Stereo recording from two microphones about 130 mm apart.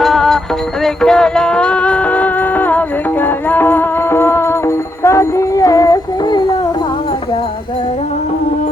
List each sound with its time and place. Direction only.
0.0 s music: 5° left (ahead or behind); by 6.6 s 25° left (ahead or behind)